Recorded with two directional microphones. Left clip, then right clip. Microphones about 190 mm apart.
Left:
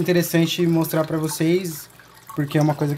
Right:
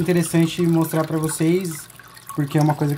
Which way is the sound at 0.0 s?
5° left (ahead or behind).